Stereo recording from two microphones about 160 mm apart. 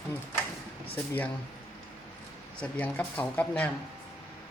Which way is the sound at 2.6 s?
10° left (ahead or behind).